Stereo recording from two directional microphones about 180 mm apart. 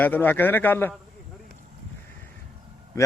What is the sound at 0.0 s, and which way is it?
Speech, 10° left (ahead or behind).